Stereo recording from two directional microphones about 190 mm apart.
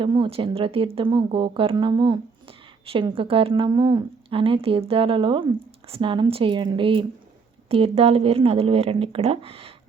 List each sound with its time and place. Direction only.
0.0 s a woman's voice: 25° right (ahead or behind)